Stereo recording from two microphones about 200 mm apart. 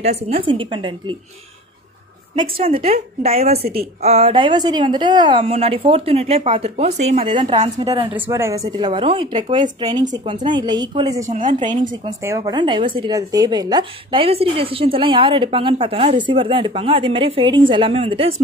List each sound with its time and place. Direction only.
0.0 s speech: 30° right (ahead or behind)
2.3 s speech: 25° right (ahead or behind)
8.1 s speech: 10° right (ahead or behind)
11.2 s speech: 40° right (ahead or behind)
12.2 s speech: 15° right (ahead or behind)